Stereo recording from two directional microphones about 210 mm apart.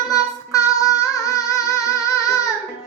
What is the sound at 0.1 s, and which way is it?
Child singing, 15° left (ahead or behind).